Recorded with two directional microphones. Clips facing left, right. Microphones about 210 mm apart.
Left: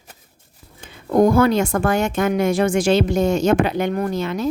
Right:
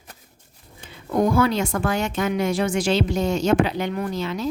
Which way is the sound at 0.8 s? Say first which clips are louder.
Left 6 dB; 45° left (ahead or behind).